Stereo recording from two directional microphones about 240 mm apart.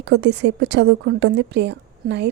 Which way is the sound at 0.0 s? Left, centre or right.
Right.